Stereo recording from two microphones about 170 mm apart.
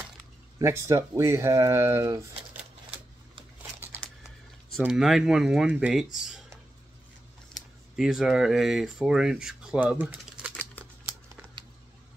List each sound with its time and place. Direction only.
0.6 s speech: 15° right (ahead or behind)
4.0 s typing: 10° left (ahead or behind)
4.7 s speech: centre (ahead or behind)
7.9 s speech: centre (ahead or behind)